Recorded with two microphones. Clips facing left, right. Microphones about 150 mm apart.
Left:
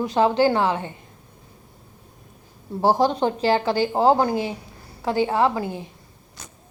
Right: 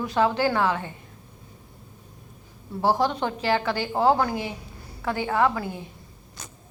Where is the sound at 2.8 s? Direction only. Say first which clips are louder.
Left 4 dB; 35° left (ahead or behind).